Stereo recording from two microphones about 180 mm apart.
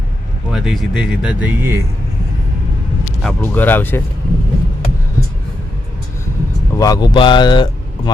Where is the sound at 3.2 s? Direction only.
10° left (ahead or behind).